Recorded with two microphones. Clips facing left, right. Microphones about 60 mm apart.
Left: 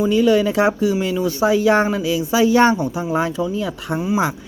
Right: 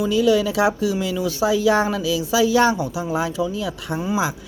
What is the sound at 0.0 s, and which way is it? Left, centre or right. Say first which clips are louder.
Speech: left 2 dB; left.